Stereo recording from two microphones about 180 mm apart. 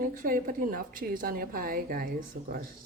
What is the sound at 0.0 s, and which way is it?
A woman's voice, 50° right (ahead or behind).